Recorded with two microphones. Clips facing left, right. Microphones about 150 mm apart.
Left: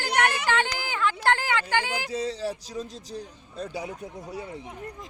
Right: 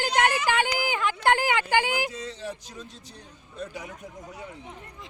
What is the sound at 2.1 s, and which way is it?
Speech, 35° left (ahead or behind).